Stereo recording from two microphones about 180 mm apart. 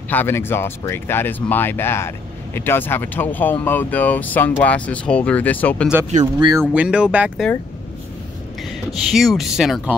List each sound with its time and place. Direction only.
0.1 s speech: 10° left (ahead or behind)
6.1 s speech: 40° right (ahead or behind)
6.7 s speech: 5° right (ahead or behind)
8.9 s speech: centre (ahead or behind)